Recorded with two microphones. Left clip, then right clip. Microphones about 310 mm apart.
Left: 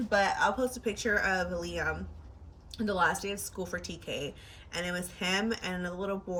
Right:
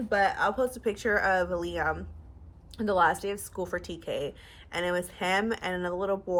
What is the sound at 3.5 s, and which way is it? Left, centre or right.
Speech, centre.